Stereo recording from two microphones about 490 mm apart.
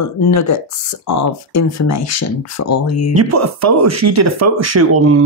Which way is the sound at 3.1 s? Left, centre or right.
Right.